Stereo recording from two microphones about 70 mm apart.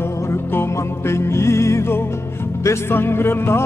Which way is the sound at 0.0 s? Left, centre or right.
Left.